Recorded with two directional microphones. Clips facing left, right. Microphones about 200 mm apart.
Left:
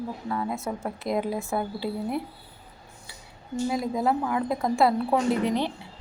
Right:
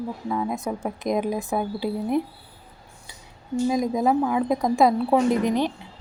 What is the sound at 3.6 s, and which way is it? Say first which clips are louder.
A woman's voice: right 4 dB; 20° right (ahead or behind).